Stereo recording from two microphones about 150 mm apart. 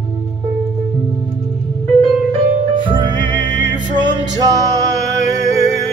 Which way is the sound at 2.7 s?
35° right (ahead or behind).